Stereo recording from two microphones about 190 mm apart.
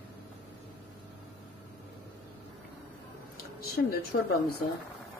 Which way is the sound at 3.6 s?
55° left (ahead or behind).